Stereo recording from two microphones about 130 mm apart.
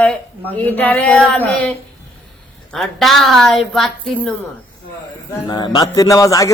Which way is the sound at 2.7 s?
Centre (ahead or behind).